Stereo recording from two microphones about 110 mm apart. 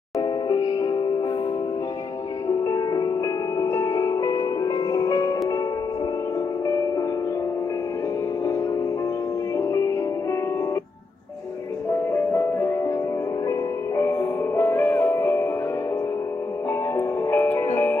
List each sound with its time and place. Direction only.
0.2 s music: 40° left (ahead or behind)
2.6 s music: 35° left (ahead or behind)
9.6 s music: 25° left (ahead or behind)
12.1 s music: 25° left (ahead or behind)
16.9 s music: 20° left (ahead or behind)